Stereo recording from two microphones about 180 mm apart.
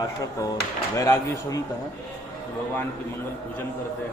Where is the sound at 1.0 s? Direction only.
20° left (ahead or behind).